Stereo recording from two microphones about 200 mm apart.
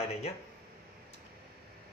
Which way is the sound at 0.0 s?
30° left (ahead or behind).